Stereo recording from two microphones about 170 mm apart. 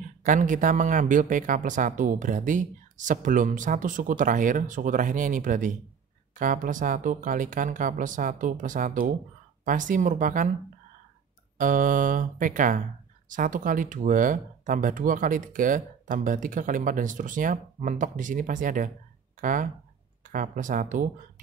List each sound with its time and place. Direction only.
0.2 s speech: 50° right (ahead or behind)
11.5 s speech: 50° right (ahead or behind)